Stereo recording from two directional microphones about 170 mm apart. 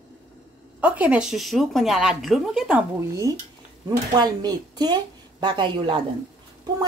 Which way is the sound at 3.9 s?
25° right (ahead or behind).